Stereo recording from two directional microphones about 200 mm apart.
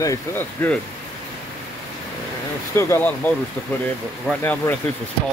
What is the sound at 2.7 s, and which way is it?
Speech, 10° left (ahead or behind).